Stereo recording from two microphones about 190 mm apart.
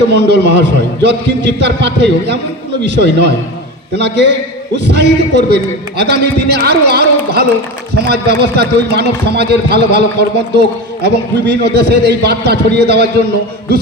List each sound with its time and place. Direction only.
0.1 s a man's voice: 60° right (ahead or behind)